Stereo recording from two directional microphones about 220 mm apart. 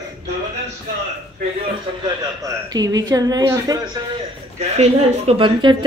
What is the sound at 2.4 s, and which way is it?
Speech, 15° right (ahead or behind).